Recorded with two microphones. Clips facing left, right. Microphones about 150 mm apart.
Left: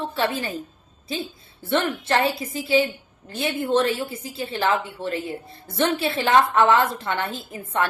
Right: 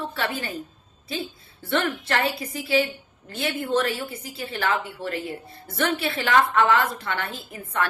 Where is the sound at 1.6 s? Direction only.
20° left (ahead or behind).